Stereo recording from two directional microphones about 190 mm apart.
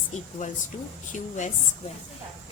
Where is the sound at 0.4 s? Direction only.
45° left (ahead or behind).